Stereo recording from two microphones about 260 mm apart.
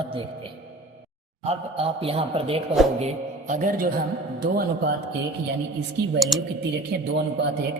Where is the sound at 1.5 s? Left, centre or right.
Right.